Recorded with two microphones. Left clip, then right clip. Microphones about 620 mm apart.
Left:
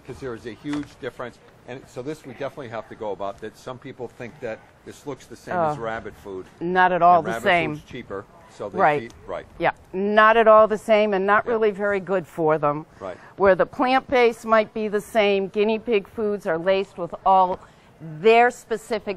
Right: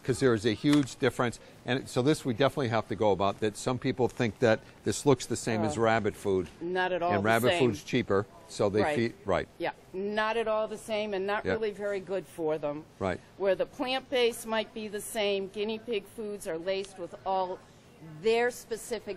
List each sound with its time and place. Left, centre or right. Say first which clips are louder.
0.0 s speech: right 7 dB; right
6.7 s a woman's voice: left 13 dB; left
7.7 s speech: right 5 dB; right
9.6 s a woman's voice: left 11 dB; left